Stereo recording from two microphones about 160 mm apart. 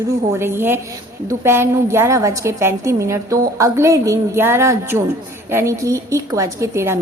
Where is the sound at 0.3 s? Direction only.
15° right (ahead or behind).